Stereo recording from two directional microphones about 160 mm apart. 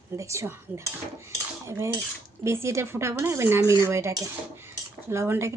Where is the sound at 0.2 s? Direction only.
20° right (ahead or behind).